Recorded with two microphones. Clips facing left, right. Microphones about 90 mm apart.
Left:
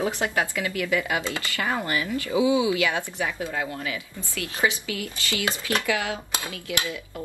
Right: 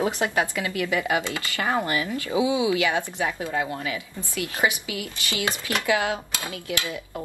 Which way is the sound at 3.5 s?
30° right (ahead or behind).